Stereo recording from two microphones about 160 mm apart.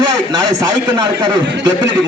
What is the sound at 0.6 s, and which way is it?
Speech, 25° right (ahead or behind).